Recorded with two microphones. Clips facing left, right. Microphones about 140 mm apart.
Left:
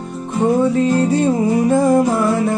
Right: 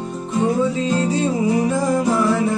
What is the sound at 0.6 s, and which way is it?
Music, 55° left (ahead or behind).